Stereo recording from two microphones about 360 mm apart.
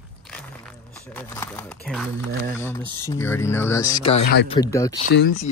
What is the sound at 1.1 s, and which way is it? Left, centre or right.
Speech, centre.